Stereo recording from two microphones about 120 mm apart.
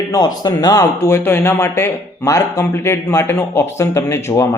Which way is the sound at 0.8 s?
20° left (ahead or behind).